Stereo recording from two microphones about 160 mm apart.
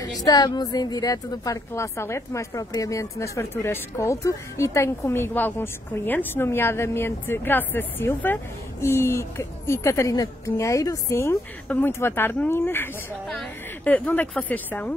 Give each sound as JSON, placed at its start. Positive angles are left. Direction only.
{"t": 0.0, "sound": "speech", "side_deg": 25}